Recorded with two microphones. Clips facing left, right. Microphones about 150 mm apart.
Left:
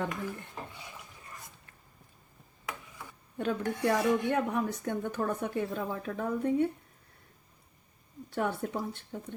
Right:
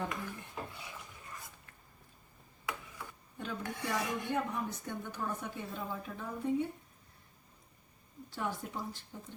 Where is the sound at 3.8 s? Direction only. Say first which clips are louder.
Left 10 dB; 60° left (ahead or behind).